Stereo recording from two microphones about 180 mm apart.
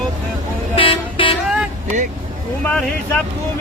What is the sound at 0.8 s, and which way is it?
Vehicle, 30° left (ahead or behind).